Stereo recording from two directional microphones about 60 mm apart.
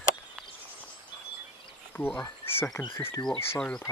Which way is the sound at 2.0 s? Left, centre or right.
Left.